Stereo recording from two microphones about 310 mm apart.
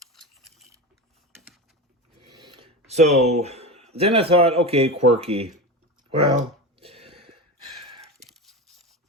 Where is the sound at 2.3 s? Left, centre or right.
Centre.